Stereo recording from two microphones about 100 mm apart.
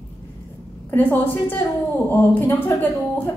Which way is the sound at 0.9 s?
20° left (ahead or behind).